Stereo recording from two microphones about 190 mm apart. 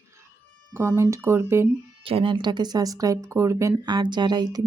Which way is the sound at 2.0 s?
25° right (ahead or behind).